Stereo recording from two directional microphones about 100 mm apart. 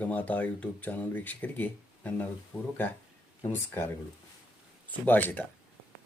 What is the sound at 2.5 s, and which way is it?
Speech, 35° left (ahead or behind).